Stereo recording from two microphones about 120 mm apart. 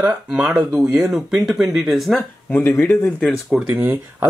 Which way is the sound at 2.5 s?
20° left (ahead or behind).